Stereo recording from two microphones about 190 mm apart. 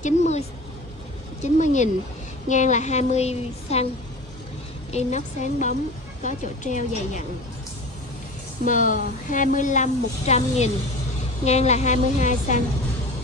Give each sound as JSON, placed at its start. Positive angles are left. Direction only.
{"t": 0.0, "sound": "a sound", "side_deg": 35}
{"t": 1.4, "sound": "speech", "side_deg": 40}
{"t": 4.9, "sound": "speech", "side_deg": 40}
{"t": 8.6, "sound": "speech", "side_deg": 45}